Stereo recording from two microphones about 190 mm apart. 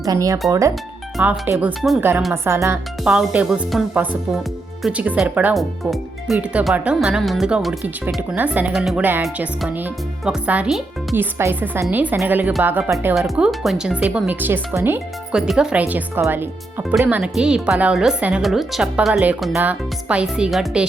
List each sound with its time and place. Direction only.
0.0 s speech: 20° right (ahead or behind)
1.1 s speech: 10° right (ahead or behind)
3.0 s speech: 5° right (ahead or behind)